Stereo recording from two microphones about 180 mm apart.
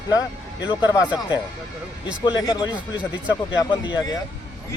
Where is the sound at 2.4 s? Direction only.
20° left (ahead or behind).